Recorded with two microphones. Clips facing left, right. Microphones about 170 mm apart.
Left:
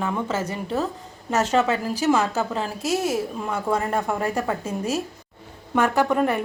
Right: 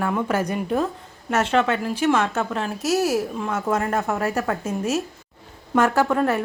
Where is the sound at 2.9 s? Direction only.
25° left (ahead or behind).